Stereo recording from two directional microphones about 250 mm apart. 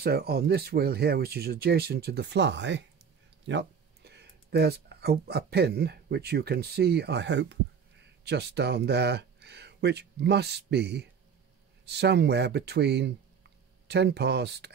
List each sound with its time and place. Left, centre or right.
0.0 s speech: right